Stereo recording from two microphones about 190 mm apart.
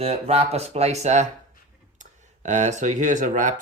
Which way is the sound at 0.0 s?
35° right (ahead or behind).